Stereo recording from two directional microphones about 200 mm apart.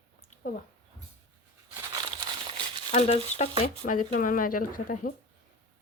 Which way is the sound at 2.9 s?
35° left (ahead or behind).